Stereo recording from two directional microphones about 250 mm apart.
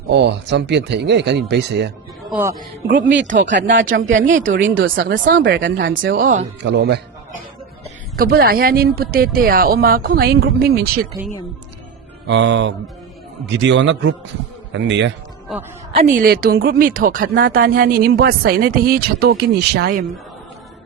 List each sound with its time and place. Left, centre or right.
0.1 s speech: right
2.3 s speech: centre
2.6 s speech: right
6.1 s speech: right
6.6 s speech: right
8.1 s speech: right
12.3 s speech: right
15.5 s a woman's voice: centre
16.1 s speech: right